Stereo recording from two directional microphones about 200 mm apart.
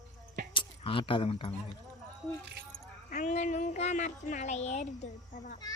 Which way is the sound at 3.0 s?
35° left (ahead or behind).